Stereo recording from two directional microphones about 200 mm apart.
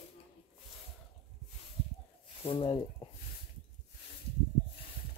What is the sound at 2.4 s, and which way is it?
Speech, 25° left (ahead or behind).